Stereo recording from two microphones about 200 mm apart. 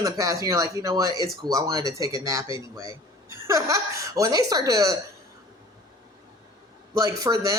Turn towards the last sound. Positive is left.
turn(degrees=-15)  # may be behind; listen again after turning